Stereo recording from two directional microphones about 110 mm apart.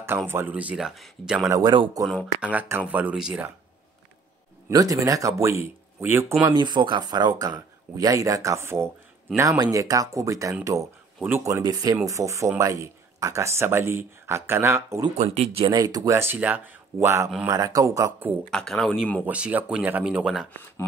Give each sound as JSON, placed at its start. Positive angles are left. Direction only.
{"t": 0.3, "sound": "speech", "side_deg": -15}
{"t": 1.5, "sound": "speech", "side_deg": -35}
{"t": 2.4, "sound": "speech", "side_deg": -15}
{"t": 4.6, "sound": "speech", "side_deg": -30}
{"t": 6.4, "sound": "speech", "side_deg": -45}
{"t": 11.1, "sound": "speech", "side_deg": -15}
{"t": 11.4, "sound": "speech", "side_deg": -30}
{"t": 15.1, "sound": "speech", "side_deg": -70}
{"t": 15.6, "sound": "speech", "side_deg": -35}
{"t": 16.2, "sound": "speech", "side_deg": -15}
{"t": 18.5, "sound": "speech", "side_deg": 5}
{"t": 19.2, "sound": "speech", "side_deg": -15}